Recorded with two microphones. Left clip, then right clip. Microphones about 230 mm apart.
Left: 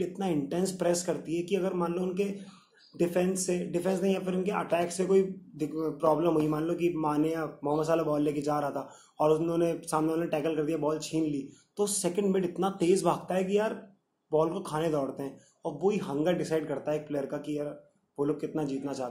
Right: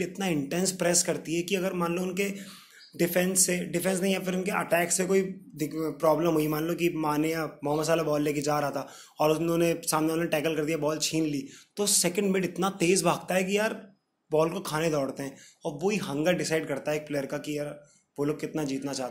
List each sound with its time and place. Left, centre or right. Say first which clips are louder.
0.0 s a man's voice: right 1 dB; right